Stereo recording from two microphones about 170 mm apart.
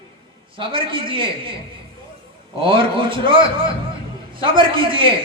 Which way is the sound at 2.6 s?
30° right (ahead or behind).